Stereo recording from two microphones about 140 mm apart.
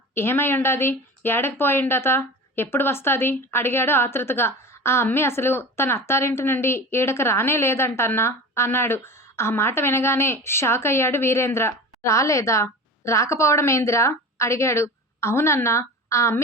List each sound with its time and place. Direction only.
0.1 s speech: 15° left (ahead or behind)